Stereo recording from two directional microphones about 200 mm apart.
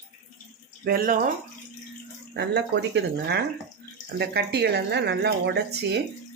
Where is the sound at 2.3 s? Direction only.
60° right (ahead or behind).